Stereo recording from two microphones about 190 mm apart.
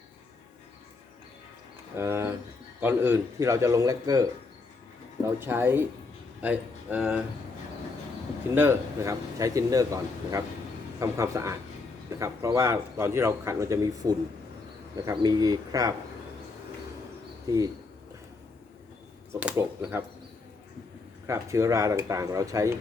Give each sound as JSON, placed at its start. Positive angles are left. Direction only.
{"t": 2.0, "sound": "speech", "side_deg": -15}
{"t": 8.5, "sound": "speech", "side_deg": -15}
{"t": 17.5, "sound": "speech", "side_deg": -20}
{"t": 19.3, "sound": "speech", "side_deg": -10}
{"t": 21.2, "sound": "speech", "side_deg": -15}